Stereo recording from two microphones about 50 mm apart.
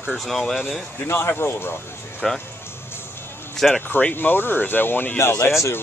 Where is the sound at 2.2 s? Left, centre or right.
Centre.